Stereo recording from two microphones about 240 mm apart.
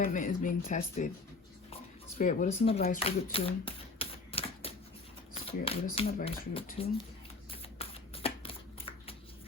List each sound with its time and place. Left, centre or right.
0.0 s speech: left
2.1 s speech: left
3.0 s typewriter: left
5.3 s a sound: left
5.8 s speech: left
7.5 s shuffling cards: left